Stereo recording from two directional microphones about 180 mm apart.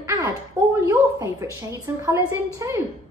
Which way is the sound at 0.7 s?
15° right (ahead or behind).